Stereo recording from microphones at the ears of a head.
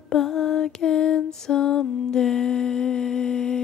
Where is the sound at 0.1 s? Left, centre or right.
Left.